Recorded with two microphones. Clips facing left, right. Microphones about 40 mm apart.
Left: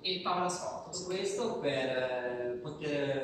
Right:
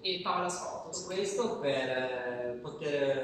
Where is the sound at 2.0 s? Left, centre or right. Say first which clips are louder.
Even; centre.